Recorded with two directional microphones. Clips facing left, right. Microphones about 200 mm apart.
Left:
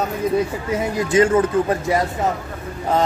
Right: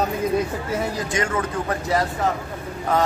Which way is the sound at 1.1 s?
25° left (ahead or behind).